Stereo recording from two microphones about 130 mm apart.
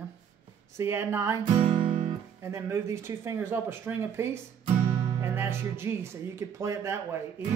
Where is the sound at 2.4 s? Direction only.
20° right (ahead or behind).